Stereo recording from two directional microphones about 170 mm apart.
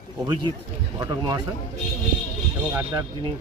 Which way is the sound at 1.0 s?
25° right (ahead or behind).